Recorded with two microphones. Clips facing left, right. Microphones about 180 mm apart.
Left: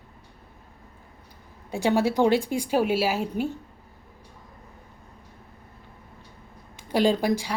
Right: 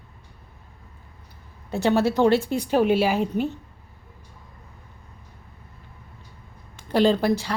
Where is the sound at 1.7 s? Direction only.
10° left (ahead or behind).